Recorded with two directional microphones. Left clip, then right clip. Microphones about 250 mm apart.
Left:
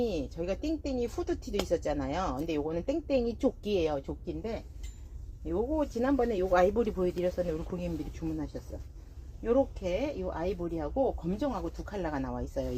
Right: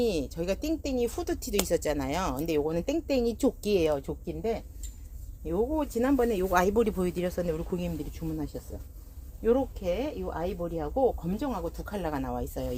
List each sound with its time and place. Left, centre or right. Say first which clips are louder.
0.0 s speech: right 4 dB; right
9.4 s speech: right 2 dB; right